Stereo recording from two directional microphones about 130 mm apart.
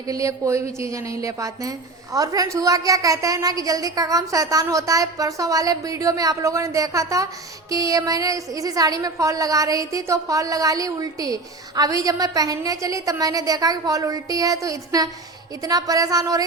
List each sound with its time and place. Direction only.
0.1 s a woman's voice: 25° right (ahead or behind)